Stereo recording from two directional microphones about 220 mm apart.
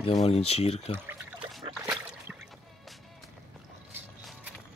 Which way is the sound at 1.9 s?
10° right (ahead or behind).